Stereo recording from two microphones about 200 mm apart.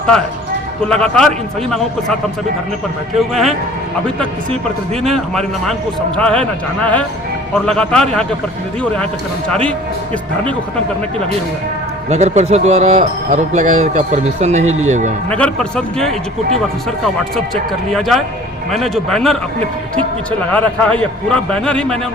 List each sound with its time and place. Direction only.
0.9 s a man's voice: 5° left (ahead or behind)
3.2 s a man's voice: centre (ahead or behind)
5.0 s a man's voice: centre (ahead or behind)
9.5 s a man's voice: 5° left (ahead or behind)
12.0 s speech: 35° right (ahead or behind)
15.3 s a man's voice: 5° left (ahead or behind)
17.3 s a man's voice: centre (ahead or behind)
20.5 s a man's voice: 5° left (ahead or behind)